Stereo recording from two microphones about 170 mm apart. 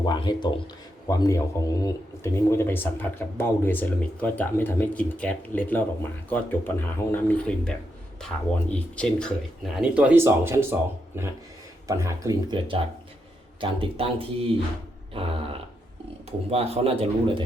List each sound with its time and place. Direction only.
0.0 s a man's voice: 25° left (ahead or behind); by 9.7 s 5° left (ahead or behind)
9.8 s a man's voice: 5° right (ahead or behind); by 14.4 s 35° right (ahead or behind)
16.5 s a man's voice: 35° right (ahead or behind)